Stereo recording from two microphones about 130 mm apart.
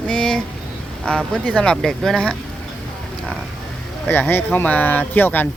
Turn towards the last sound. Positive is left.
turn(degrees=15)  # may be behind; listen again after turning